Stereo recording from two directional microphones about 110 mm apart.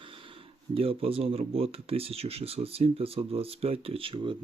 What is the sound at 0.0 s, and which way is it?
Speech, 55° right (ahead or behind).